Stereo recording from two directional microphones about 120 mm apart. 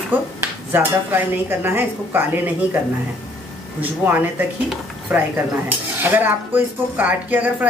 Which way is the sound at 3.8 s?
15° right (ahead or behind).